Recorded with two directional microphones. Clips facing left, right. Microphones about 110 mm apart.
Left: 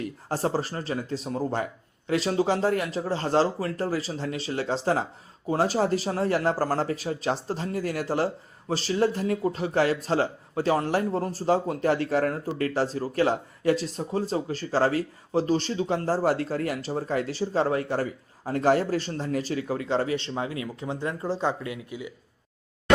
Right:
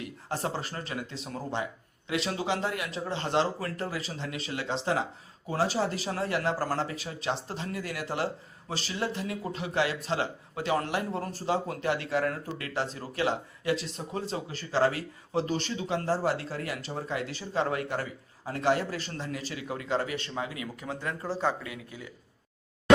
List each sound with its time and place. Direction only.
0.0 s speech: 40° left (ahead or behind); by 22.1 s 15° left (ahead or behind)